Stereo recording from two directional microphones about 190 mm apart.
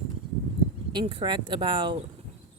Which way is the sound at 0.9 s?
25° right (ahead or behind).